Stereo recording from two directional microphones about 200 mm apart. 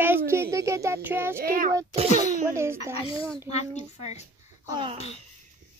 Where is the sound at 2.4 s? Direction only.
15° right (ahead or behind).